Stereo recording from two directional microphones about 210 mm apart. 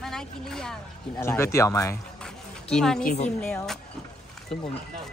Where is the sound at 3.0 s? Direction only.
35° left (ahead or behind).